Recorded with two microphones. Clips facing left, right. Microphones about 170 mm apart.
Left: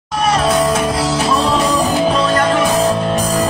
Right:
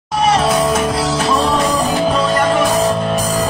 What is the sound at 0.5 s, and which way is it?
Music, centre (ahead or behind).